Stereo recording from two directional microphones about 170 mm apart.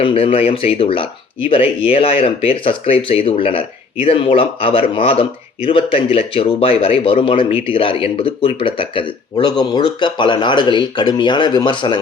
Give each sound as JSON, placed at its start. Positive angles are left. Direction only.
{"t": 0.0, "sound": "speech", "side_deg": 30}